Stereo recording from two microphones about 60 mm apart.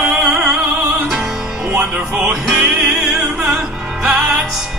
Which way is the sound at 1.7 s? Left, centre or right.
Centre.